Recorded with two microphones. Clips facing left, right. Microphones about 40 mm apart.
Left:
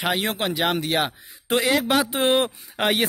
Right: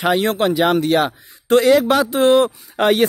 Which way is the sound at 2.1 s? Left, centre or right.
Left.